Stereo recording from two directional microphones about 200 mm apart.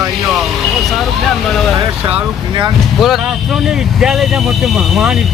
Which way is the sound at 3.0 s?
Centre (ahead or behind).